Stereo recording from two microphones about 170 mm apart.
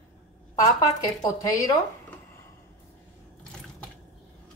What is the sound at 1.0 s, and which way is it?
Speech, 20° left (ahead or behind).